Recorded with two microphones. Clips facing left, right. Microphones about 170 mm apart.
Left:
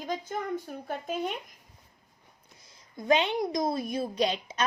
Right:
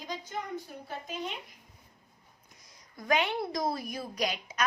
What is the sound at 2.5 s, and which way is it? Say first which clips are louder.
A woman's voice: left 5 dB; 25° left (ahead or behind).